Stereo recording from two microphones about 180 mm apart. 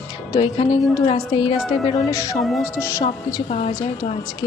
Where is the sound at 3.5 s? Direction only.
35° left (ahead or behind).